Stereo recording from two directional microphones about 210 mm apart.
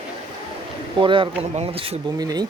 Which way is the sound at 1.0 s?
25° right (ahead or behind).